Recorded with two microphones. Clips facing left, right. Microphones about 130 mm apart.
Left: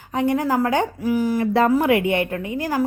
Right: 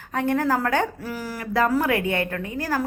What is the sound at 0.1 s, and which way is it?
Speech, 15° left (ahead or behind).